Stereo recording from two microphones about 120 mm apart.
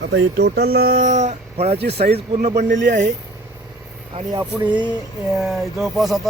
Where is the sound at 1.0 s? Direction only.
70° right (ahead or behind).